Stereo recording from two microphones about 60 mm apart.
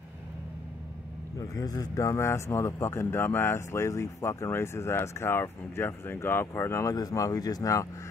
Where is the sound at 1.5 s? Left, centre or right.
Left.